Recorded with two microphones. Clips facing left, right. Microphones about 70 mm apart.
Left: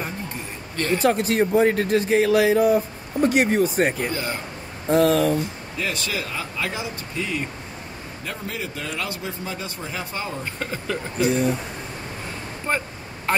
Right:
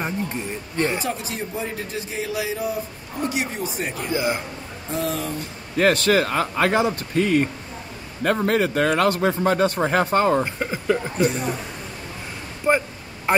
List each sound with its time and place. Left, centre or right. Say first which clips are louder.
0.0 s music: right 4 dB; right
1.0 s a man's voice: left 9 dB; left
4.1 s speech: right 5 dB; centre
4.9 s a man's voice: left 8 dB; left
5.8 s a man's voice: right 10 dB; right
10.4 s speech: right 4 dB; centre
12.7 s speech: right 6 dB; centre